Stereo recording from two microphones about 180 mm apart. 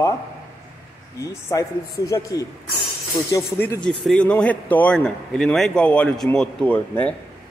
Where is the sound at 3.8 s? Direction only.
5° left (ahead or behind).